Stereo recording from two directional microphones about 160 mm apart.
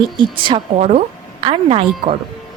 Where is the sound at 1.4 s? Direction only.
35° right (ahead or behind).